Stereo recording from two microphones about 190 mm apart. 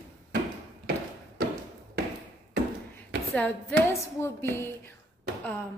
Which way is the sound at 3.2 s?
5° left (ahead or behind).